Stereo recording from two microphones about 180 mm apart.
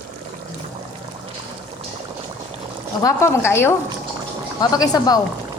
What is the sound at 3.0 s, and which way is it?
A woman's voice, 15° left (ahead or behind).